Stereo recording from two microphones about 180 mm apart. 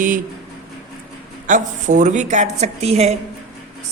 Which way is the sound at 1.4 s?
45° right (ahead or behind).